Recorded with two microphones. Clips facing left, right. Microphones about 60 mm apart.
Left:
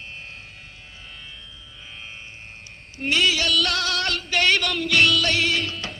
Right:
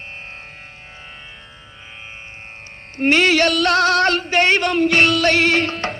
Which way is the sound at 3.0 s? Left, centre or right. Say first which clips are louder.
Right 7 dB; right.